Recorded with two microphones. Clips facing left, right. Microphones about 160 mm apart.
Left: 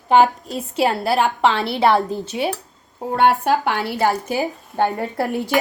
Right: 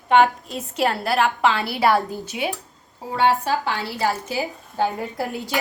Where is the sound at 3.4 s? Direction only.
60° left (ahead or behind).